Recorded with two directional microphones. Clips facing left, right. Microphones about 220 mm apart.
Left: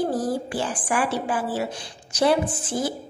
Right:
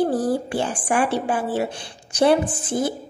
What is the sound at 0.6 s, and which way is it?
A woman's voice, 25° right (ahead or behind).